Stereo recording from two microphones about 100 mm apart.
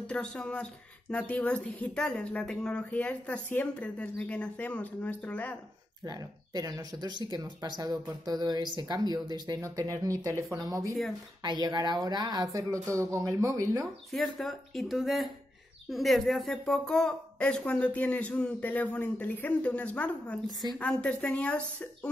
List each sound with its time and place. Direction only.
0.0 s a woman's voice: 10° left (ahead or behind)
6.0 s speech: 40° right (ahead or behind)
11.4 s speech: 45° right (ahead or behind)
14.1 s a woman's voice: 5° left (ahead or behind)